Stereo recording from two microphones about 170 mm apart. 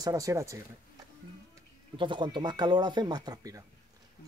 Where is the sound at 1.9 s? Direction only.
30° right (ahead or behind).